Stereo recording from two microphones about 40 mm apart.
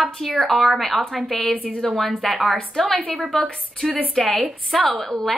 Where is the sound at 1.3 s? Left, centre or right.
Left.